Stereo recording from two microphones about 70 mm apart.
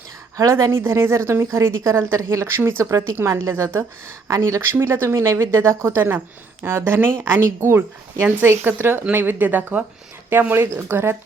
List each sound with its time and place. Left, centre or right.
0.5 s a woman's voice: right
4.3 s a woman's voice: right